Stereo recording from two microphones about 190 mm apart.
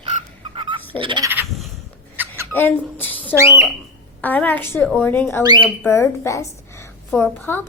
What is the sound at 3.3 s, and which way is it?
Speech, 15° right (ahead or behind).